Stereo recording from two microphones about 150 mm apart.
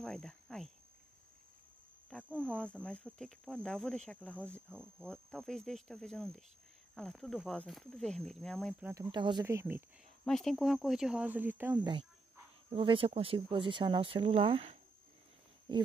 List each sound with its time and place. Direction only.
0.0 s speech: 5° left (ahead or behind)
2.2 s speech: 10° right (ahead or behind)
2.6 s speech: 5° left (ahead or behind)
9.1 s speech: 30° right (ahead or behind)
9.4 s speech: 15° right (ahead or behind)
10.2 s speech: centre (ahead or behind); by 11.8 s 15° right (ahead or behind)
11.8 s speech: 30° right (ahead or behind)